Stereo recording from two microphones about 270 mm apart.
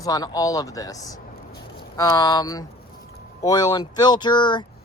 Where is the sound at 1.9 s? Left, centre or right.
Centre.